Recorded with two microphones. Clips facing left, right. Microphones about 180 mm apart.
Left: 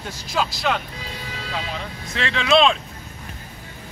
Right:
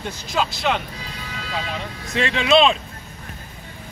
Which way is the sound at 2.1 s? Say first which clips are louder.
Right 4 dB; 20° right (ahead or behind).